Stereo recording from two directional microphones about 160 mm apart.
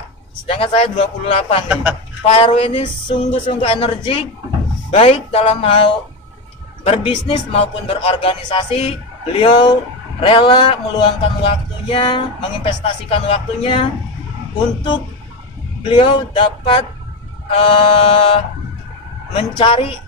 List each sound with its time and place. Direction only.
0.5 s speech: 35° left (ahead or behind)
1.7 s a man's voice: 5° right (ahead or behind)
2.3 s speech: 35° left (ahead or behind)
15.9 s speech: 30° left (ahead or behind)